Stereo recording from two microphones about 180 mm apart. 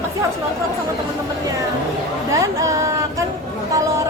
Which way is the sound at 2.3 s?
15° right (ahead or behind).